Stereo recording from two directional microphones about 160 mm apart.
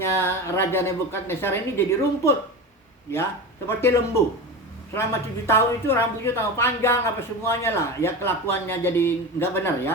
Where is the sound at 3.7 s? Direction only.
15° left (ahead or behind).